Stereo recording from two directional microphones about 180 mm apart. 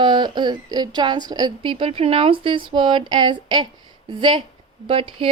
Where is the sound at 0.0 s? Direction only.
25° right (ahead or behind).